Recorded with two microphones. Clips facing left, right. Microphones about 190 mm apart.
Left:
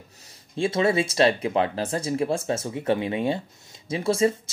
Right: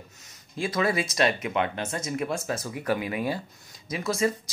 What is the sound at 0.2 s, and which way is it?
Speech, 30° left (ahead or behind).